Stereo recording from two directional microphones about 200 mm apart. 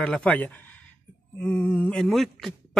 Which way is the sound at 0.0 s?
5° left (ahead or behind).